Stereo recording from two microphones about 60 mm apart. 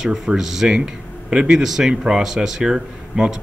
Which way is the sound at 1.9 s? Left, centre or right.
Centre.